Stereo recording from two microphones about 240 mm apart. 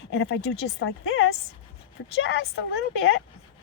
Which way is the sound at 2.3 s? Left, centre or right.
Left.